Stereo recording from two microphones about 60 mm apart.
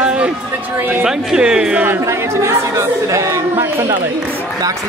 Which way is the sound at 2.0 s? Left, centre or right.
Right.